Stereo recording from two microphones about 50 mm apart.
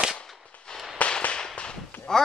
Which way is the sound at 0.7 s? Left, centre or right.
Centre.